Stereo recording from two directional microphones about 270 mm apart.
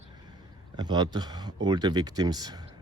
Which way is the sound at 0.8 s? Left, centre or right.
Centre.